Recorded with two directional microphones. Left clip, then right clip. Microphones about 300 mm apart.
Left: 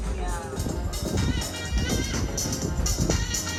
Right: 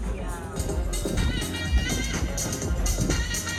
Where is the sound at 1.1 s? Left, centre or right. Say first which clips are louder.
Left 2 dB; left.